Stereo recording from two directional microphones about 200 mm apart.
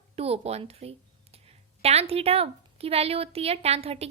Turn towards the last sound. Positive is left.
turn(degrees=-30)  # may be behind; listen again after turning